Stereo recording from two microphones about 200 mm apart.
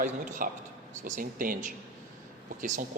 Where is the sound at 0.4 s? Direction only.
45° right (ahead or behind).